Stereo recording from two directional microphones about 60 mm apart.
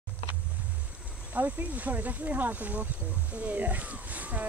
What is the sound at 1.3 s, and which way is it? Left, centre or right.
Speech, right.